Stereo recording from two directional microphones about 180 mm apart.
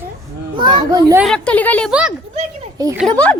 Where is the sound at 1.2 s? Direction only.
5° left (ahead or behind).